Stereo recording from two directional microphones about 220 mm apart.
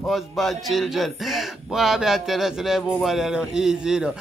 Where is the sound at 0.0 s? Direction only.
Centre (ahead or behind).